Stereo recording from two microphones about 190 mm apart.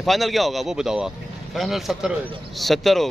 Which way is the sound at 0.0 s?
Centre (ahead or behind).